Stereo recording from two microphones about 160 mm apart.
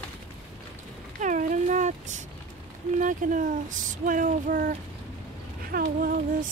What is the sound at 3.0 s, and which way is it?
Speech, 55° right (ahead or behind).